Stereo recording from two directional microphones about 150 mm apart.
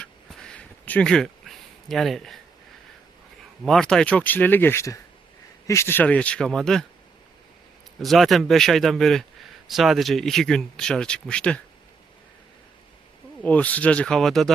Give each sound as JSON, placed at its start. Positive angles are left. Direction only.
{"t": 0.0, "sound": "a sound", "side_deg": 5}
{"t": 3.7, "sound": "speech", "side_deg": 5}
{"t": 8.0, "sound": "speech", "side_deg": 0}
{"t": 13.4, "sound": "speech", "side_deg": 10}